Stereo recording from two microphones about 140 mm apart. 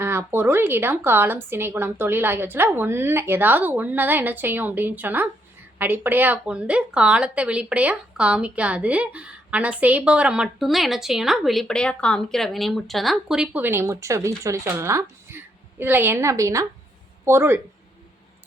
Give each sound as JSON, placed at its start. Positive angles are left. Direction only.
{"t": 0.0, "sound": "speech", "side_deg": -15}